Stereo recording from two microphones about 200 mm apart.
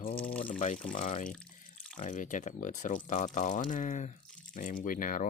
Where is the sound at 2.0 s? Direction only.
40° left (ahead or behind).